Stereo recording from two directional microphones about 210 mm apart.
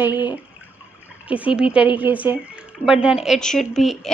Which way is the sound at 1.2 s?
5° right (ahead or behind).